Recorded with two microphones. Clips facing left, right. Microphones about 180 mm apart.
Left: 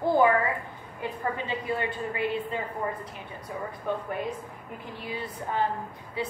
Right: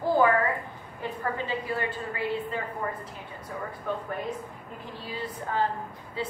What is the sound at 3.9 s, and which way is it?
A woman's voice, 15° left (ahead or behind).